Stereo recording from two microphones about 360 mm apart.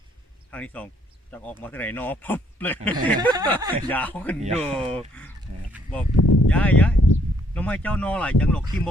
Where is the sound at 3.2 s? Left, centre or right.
Centre.